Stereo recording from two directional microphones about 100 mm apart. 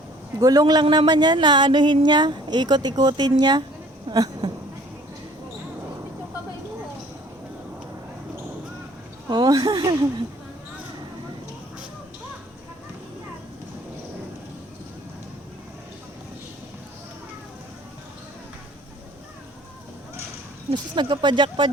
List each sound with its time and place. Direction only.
0.3 s a man's voice: 40° right (ahead or behind)
4.1 s a sound: 45° right (ahead or behind)
9.3 s speech: 40° right (ahead or behind)
20.7 s speech: 50° right (ahead or behind)